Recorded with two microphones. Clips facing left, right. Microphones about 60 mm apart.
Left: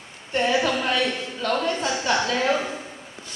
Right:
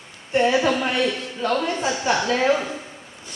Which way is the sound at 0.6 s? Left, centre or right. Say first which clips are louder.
Right 2 dB; centre.